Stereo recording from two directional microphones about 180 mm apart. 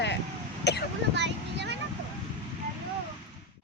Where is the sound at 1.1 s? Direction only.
70° right (ahead or behind).